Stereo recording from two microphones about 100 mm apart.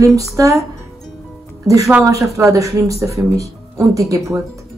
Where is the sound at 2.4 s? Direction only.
30° right (ahead or behind).